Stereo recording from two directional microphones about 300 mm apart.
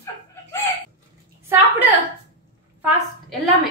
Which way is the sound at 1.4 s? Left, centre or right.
Centre.